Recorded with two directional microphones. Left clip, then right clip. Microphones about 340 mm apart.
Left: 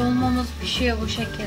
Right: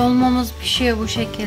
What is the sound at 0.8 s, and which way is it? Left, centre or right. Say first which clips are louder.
Music: right 5 dB; right.